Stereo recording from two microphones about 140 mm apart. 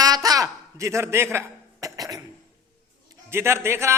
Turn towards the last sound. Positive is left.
turn(degrees=-20)  # may be behind; listen again after turning